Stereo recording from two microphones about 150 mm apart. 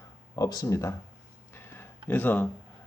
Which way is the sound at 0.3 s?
25° left (ahead or behind).